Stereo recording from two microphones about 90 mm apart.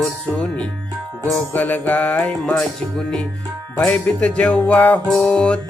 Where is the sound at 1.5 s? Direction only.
20° left (ahead or behind).